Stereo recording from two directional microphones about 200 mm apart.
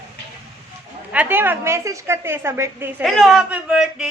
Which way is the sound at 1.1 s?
10° right (ahead or behind).